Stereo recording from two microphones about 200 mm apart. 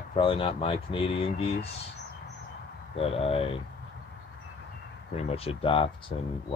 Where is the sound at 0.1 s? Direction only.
25° left (ahead or behind).